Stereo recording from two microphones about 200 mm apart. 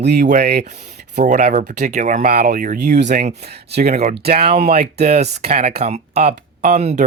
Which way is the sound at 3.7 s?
50° right (ahead or behind).